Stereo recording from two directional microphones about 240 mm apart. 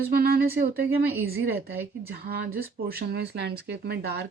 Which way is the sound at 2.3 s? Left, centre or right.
Right.